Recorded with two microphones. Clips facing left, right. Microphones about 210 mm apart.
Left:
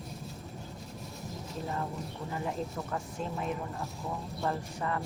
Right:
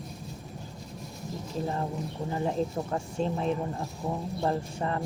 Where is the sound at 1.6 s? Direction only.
30° right (ahead or behind).